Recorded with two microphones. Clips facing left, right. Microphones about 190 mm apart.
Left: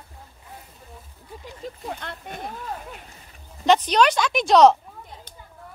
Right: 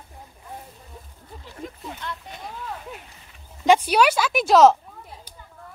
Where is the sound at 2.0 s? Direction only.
55° left (ahead or behind).